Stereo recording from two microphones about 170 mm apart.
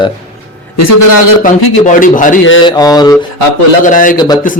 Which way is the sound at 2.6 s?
20° left (ahead or behind).